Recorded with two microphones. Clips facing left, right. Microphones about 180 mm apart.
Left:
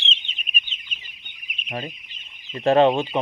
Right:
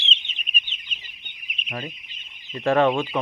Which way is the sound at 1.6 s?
30° left (ahead or behind).